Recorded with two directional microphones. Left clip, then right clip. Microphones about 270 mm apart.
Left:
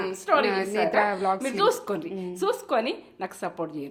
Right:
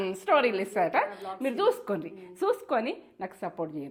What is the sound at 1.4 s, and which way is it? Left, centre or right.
A woman's voice, right.